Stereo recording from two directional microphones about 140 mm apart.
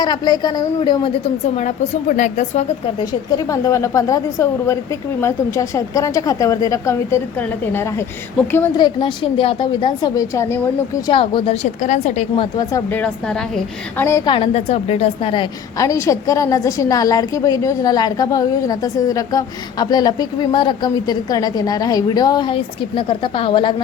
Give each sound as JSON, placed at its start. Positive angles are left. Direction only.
{"t": 0.0, "sound": "a woman's voice", "side_deg": 30}
{"t": 1.5, "sound": "speech", "side_deg": 55}
{"t": 3.0, "sound": "a woman's voice", "side_deg": 25}
{"t": 8.8, "sound": "a woman's voice", "side_deg": 35}
{"t": 12.4, "sound": "a woman's voice", "side_deg": 25}
{"t": 12.9, "sound": "a woman's voice", "side_deg": 10}
{"t": 13.9, "sound": "a woman's voice", "side_deg": 20}
{"t": 14.3, "sound": "a woman's voice", "side_deg": 40}
{"t": 15.8, "sound": "a woman's voice", "side_deg": 20}